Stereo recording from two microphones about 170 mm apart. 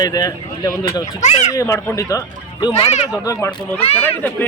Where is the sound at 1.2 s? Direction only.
45° left (ahead or behind).